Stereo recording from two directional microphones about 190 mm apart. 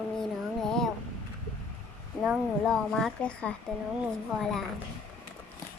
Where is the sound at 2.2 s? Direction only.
Centre (ahead or behind).